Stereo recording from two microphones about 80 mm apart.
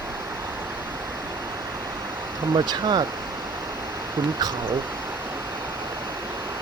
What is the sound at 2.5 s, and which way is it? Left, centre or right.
Speech, right.